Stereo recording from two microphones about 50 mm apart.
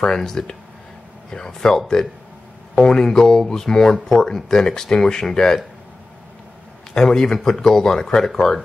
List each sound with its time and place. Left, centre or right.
0.0 s speech: centre
6.9 s speech: centre